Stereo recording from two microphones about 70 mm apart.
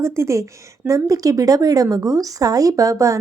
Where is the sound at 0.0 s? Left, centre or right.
Right.